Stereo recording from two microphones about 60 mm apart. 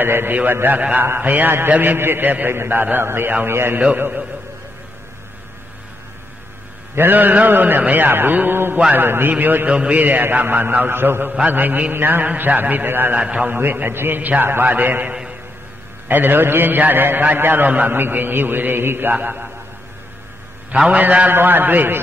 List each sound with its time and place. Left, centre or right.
0.0 s a man's voice: right
7.0 s a man's voice: right
13.2 s a man's voice: right
13.6 s a man's voice: right
20.7 s a man's voice: centre
21.3 s a man's voice: right